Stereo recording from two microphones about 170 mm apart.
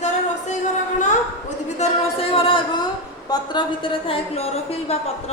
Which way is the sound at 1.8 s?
35° left (ahead or behind).